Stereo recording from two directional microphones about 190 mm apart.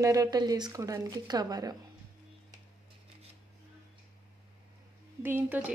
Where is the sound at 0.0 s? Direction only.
20° right (ahead or behind).